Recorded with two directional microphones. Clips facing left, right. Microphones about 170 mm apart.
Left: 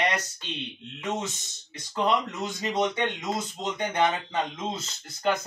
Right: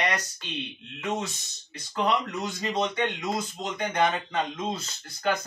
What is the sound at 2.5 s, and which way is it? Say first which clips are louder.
Speech: left 2 dB; 20° left (ahead or behind).